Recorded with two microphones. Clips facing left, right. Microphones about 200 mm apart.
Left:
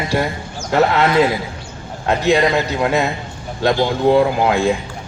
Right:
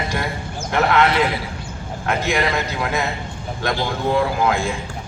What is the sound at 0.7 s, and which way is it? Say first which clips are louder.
Speech: left 3 dB; 25° left (ahead or behind).